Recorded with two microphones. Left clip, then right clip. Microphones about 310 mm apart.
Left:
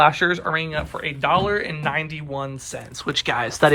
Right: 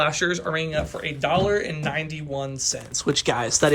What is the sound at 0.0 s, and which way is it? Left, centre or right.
Speech, centre.